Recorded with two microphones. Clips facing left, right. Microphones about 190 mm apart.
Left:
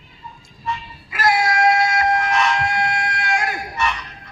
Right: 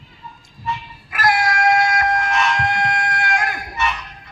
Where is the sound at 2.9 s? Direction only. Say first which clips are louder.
Right 1 dB; 50° right (ahead or behind).